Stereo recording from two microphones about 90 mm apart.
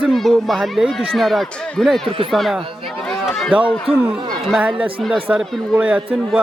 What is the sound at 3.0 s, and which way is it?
Run, 5° left (ahead or behind).